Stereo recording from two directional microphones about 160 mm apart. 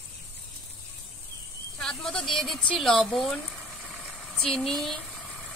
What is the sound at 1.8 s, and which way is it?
Speech, 5° left (ahead or behind).